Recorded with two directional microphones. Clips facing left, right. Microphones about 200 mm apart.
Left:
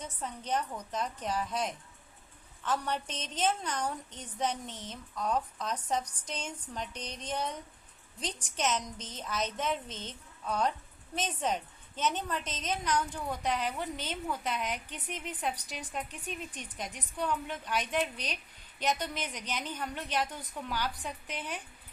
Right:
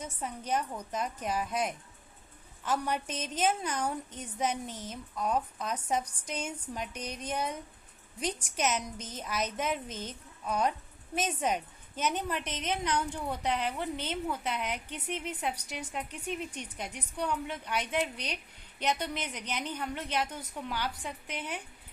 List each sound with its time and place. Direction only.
0.0 s a woman's voice: 10° right (ahead or behind)
19.0 s a woman's voice: 15° right (ahead or behind)